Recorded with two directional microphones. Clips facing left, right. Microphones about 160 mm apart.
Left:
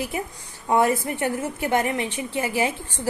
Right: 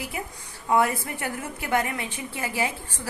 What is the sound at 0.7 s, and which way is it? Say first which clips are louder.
A woman's voice: left 3 dB; 25° left (ahead or behind).